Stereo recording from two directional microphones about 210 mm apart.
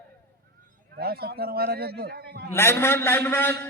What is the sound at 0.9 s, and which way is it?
A man's voice, 50° right (ahead or behind).